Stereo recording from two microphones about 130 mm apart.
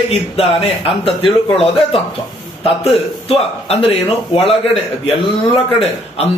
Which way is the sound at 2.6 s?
50° left (ahead or behind).